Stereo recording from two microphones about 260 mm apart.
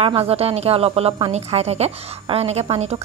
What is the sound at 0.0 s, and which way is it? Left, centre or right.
A woman's voice, right.